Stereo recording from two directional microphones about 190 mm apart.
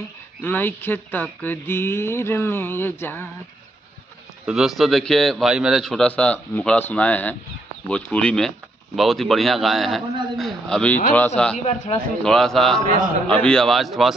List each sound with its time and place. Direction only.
0.4 s speech: 10° left (ahead or behind)
4.5 s a man's voice: centre (ahead or behind)
11.5 s a man's voice: 35° left (ahead or behind)
12.2 s a man's voice: 5° left (ahead or behind)